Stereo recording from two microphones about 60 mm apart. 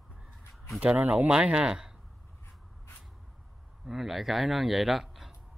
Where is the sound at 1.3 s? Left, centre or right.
Centre.